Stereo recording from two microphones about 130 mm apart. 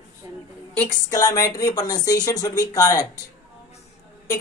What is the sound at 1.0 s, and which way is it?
Speech, 25° left (ahead or behind).